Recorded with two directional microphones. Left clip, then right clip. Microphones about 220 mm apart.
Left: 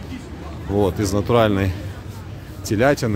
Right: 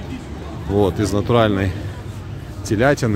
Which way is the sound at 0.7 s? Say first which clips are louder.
Right 2 dB; 5° left (ahead or behind).